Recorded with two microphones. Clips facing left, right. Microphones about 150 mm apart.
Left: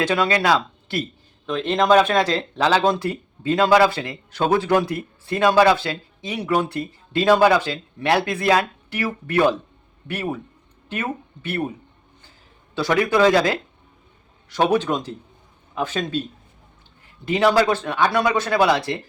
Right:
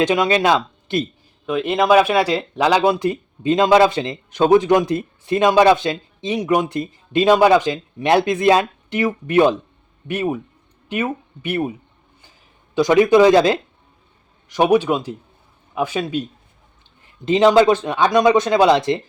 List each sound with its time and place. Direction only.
0.0 s speech: 20° right (ahead or behind)
1.5 s speech: 10° right (ahead or behind)
12.7 s speech: 20° right (ahead or behind)
17.2 s speech: 20° right (ahead or behind)